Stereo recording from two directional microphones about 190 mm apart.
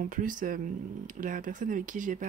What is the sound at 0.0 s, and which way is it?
Speech, 45° right (ahead or behind).